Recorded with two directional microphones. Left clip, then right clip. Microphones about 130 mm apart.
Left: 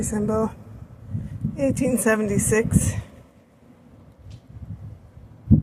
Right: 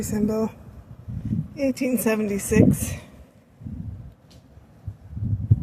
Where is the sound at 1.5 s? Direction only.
5° left (ahead or behind).